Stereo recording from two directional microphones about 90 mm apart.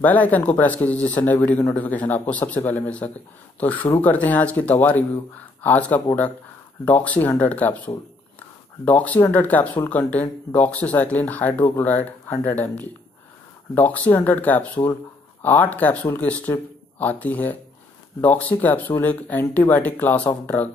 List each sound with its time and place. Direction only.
0.0 s speech: 20° left (ahead or behind)